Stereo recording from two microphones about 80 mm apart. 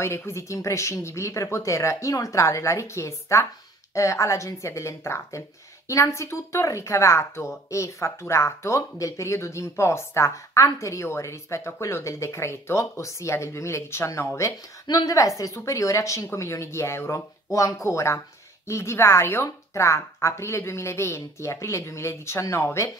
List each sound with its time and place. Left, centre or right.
0.0 s speech: left